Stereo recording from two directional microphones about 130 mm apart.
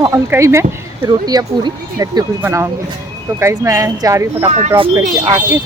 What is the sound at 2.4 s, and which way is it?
Speech, 20° right (ahead or behind).